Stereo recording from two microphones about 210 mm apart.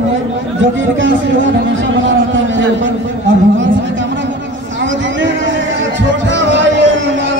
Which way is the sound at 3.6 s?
60° right (ahead or behind).